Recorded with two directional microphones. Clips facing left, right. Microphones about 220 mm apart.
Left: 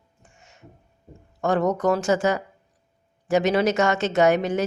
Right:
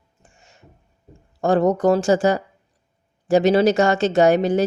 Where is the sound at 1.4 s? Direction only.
30° right (ahead or behind).